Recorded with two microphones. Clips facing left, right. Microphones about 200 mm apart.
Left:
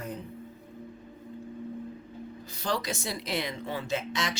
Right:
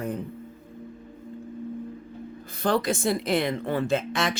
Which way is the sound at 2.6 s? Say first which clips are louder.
Right 8 dB; 55° right (ahead or behind).